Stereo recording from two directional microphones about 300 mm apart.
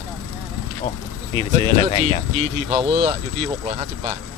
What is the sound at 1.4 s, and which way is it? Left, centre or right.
Speech, centre.